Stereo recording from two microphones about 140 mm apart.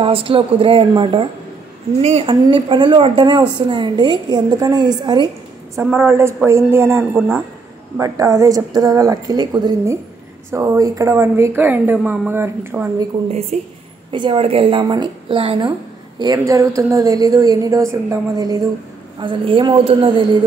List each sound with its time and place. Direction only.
0.0 s speech: 40° right (ahead or behind)
2.0 s speech: 45° right (ahead or behind); by 5.3 s 30° right (ahead or behind)
5.9 s a woman's voice: 15° right (ahead or behind)
7.2 s speech: centre (ahead or behind)
8.0 s a woman's voice: 25° right (ahead or behind)
13.5 s a woman's voice: 55° right (ahead or behind)
14.1 s speech: 35° right (ahead or behind)
16.2 s a woman's voice: 25° right (ahead or behind)